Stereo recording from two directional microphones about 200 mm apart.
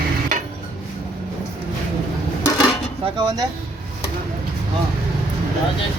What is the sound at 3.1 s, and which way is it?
Speech, 20° right (ahead or behind).